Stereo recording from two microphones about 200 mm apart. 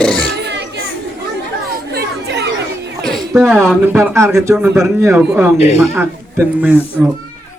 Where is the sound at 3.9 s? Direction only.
15° right (ahead or behind).